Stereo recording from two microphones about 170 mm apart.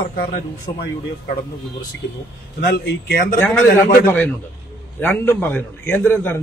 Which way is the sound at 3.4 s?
10° left (ahead or behind).